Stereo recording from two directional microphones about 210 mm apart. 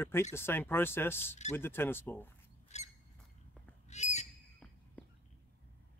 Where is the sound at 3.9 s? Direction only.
35° left (ahead or behind).